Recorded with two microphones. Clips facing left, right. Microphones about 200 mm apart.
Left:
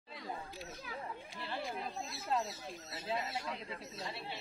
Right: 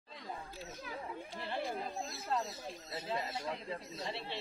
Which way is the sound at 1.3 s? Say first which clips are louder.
Right 3 dB; 50° right (ahead or behind).